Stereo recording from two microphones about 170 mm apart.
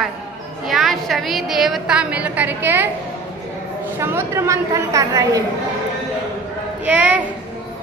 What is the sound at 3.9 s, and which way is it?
A woman's voice, 15° right (ahead or behind).